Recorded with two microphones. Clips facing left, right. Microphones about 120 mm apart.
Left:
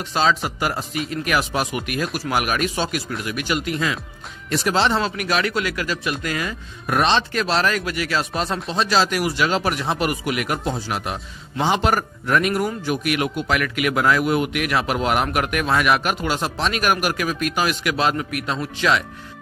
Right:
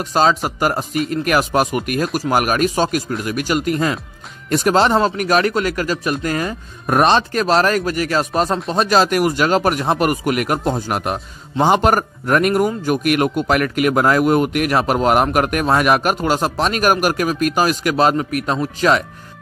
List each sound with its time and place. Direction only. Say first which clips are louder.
0.0 s speech: right 4 dB; 40° right (ahead or behind)